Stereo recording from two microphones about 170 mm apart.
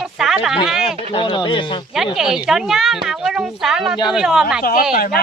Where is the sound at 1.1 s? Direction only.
30° left (ahead or behind).